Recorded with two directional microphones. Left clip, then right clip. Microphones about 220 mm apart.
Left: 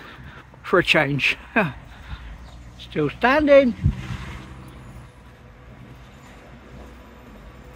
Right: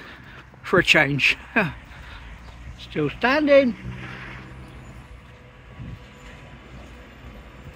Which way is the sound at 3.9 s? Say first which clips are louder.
Right 1 dB; 60° left (ahead or behind).